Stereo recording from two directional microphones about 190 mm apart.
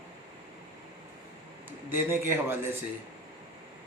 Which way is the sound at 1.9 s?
10° right (ahead or behind).